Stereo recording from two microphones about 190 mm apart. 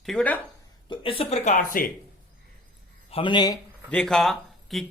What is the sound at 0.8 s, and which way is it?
Speech, 25° left (ahead or behind).